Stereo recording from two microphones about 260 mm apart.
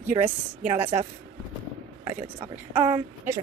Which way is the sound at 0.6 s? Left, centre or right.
Right.